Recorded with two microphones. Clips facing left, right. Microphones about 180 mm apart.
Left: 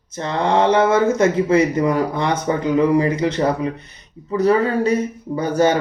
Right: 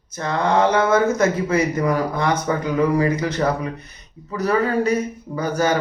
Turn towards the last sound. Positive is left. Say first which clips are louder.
# left 4 dB
turn(degrees=25)  # may be behind; listen again after turning